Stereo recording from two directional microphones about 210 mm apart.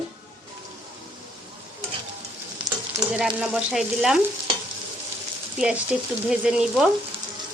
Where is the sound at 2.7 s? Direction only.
15° right (ahead or behind).